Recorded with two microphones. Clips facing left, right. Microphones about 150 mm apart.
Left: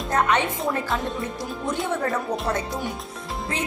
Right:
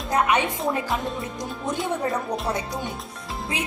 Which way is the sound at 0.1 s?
10° right (ahead or behind).